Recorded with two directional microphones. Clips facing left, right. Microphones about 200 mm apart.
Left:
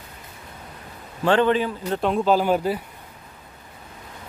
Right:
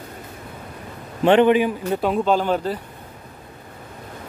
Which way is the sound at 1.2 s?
20° right (ahead or behind).